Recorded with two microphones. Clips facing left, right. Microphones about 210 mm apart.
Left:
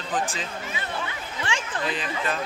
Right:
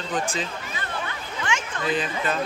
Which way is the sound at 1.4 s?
30° left (ahead or behind).